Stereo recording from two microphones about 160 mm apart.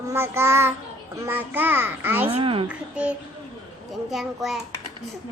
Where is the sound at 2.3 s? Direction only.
35° right (ahead or behind).